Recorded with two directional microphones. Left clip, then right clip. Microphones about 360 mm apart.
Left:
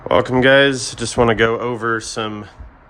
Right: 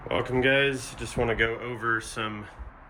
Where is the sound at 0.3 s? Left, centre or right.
Left.